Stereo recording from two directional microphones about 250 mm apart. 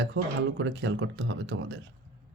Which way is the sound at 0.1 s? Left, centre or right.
Right.